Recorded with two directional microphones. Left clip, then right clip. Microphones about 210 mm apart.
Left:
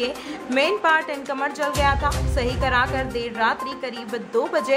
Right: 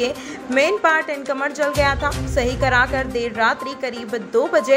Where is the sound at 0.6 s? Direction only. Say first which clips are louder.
Right 3 dB; 10° right (ahead or behind).